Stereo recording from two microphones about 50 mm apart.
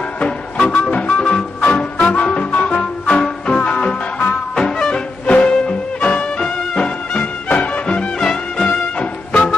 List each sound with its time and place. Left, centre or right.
0.2 s music: left
5.2 s music: left
7.4 s music: left